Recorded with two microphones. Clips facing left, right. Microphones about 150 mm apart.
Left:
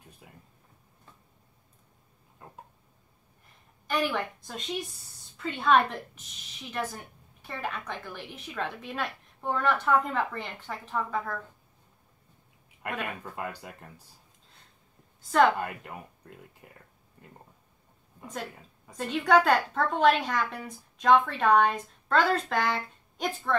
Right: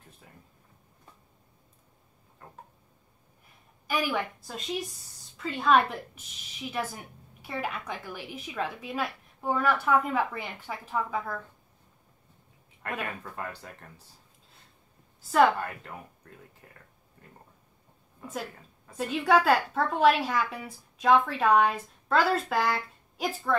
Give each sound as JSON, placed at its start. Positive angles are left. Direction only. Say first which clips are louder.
{"t": 0.2, "sound": "a sound", "louder": "left 2 dB", "side_deg": 15}
{"t": 2.4, "sound": "a sound", "louder": "left 1 dB", "side_deg": 15}
{"t": 3.8, "sound": "a woman's voice", "louder": "even", "side_deg": -5}
{"t": 12.8, "sound": "speech", "louder": "even", "side_deg": 15}
{"t": 15.3, "sound": "a woman's voice", "louder": "right 1 dB", "side_deg": -5}
{"t": 15.8, "sound": "speech", "louder": "left 1 dB", "side_deg": 15}
{"t": 18.9, "sound": "a woman's voice", "louder": "left 1 dB", "side_deg": -5}